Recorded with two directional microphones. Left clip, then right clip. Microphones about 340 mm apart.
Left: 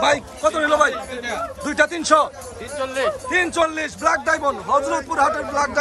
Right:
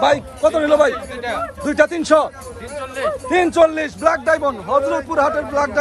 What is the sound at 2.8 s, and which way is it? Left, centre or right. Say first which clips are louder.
Speech: left 1 dB; centre.